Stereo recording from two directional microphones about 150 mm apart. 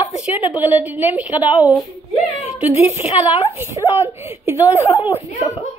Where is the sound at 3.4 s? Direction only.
15° right (ahead or behind).